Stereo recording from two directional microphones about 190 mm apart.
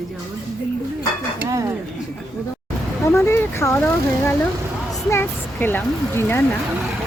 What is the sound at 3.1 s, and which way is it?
Speech, 15° left (ahead or behind).